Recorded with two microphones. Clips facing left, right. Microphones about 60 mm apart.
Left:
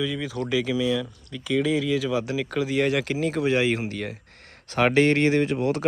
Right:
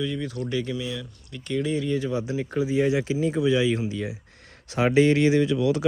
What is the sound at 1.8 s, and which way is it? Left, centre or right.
Speech, left.